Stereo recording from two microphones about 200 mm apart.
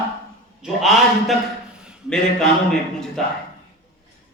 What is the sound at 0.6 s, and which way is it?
A man's voice, centre (ahead or behind).